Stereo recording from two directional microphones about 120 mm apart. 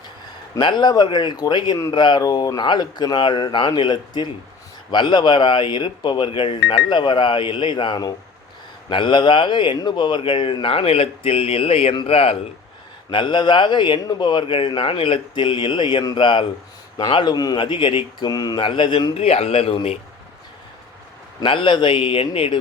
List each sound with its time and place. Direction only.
0.6 s a man's voice: 40° left (ahead or behind)
13.1 s a man's voice: 40° left (ahead or behind)
21.4 s speech: 45° left (ahead or behind)